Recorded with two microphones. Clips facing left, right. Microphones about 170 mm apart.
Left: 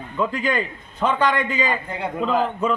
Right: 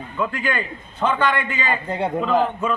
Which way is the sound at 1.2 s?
40° left (ahead or behind).